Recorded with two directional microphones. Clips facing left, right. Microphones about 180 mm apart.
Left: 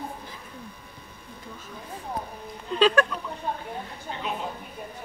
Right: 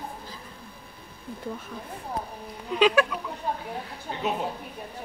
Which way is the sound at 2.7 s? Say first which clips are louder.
Even; 10° right (ahead or behind).